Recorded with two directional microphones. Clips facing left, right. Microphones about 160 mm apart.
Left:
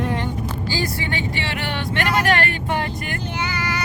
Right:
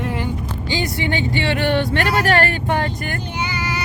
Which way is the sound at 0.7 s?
25° right (ahead or behind).